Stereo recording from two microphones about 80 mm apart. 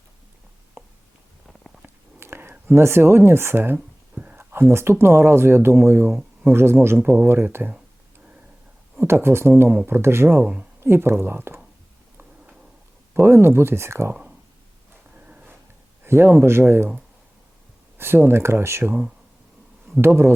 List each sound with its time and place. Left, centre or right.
0.8 s a sound: right
1.5 s a sound: centre
1.8 s a sound: right
3.8 s a sound: centre
4.4 s speech: right
9.0 s speech: right
10.4 s speech: centre
10.8 s speech: right
13.1 s speech: right
15.1 s dog: centre
16.0 s speech: right
17.9 s speech: right
20.0 s speech: right